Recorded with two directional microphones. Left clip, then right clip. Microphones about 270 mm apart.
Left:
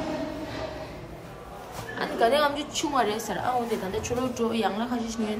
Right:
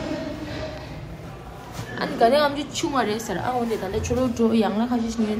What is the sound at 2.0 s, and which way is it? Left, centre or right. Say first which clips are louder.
A woman's voice: right 4 dB; centre.